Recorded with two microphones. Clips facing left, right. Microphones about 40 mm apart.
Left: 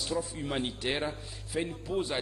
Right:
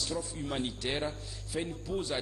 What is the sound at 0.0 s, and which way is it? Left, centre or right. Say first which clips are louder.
Speech: left 3 dB; centre.